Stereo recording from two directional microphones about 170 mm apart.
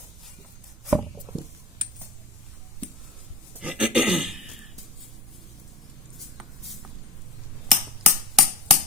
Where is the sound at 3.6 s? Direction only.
5° right (ahead or behind).